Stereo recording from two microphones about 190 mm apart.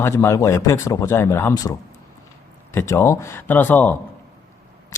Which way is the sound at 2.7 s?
15° left (ahead or behind).